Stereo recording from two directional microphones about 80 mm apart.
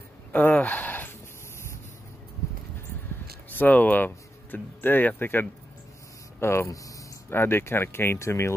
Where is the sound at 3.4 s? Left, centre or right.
Left.